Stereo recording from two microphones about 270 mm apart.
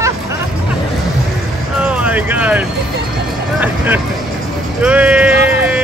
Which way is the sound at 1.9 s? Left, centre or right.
Centre.